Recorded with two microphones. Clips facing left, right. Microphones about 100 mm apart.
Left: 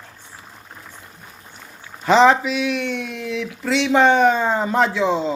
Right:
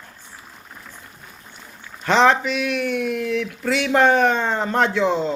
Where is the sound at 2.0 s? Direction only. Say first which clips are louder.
Left 3 dB; 5° left (ahead or behind).